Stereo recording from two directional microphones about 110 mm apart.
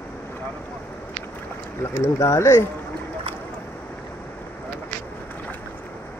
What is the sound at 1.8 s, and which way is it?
Speech, 25° left (ahead or behind).